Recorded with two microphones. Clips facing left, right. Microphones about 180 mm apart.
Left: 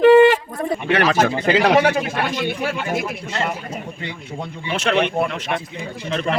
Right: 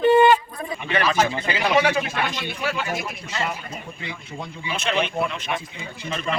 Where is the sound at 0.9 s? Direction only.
70° left (ahead or behind).